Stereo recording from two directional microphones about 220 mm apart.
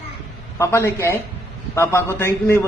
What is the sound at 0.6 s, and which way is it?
A man's voice, 10° left (ahead or behind).